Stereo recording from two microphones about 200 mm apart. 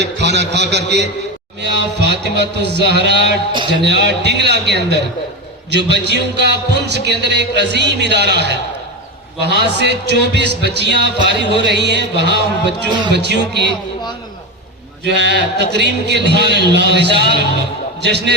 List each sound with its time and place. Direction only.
0.0 s speech: 60° right (ahead or behind)
3.5 s a man's voice: 25° right (ahead or behind)
4.0 s speech: 60° right (ahead or behind)
15.0 s speech: 60° right (ahead or behind)